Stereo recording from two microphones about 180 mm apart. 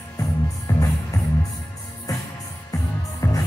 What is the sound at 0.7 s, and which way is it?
Music, 15° left (ahead or behind).